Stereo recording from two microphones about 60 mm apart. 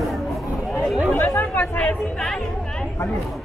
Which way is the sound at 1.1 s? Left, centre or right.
Left.